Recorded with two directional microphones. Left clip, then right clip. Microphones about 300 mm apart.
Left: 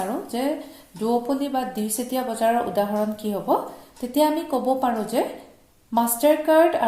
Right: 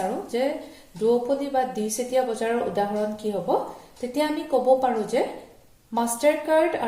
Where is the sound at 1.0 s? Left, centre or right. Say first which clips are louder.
Right 1 dB; left.